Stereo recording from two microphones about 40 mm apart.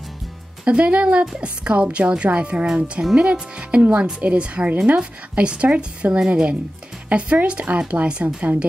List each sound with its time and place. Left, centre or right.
0.7 s speech: right
2.6 s speech: centre
3.2 s a woman's voice: right
6.1 s speech: centre
7.1 s a woman's voice: right